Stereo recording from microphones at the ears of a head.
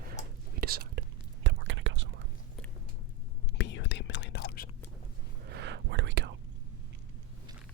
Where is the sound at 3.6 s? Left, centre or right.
Left.